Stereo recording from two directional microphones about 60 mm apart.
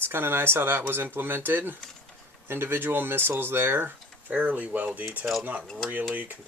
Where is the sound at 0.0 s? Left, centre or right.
Right.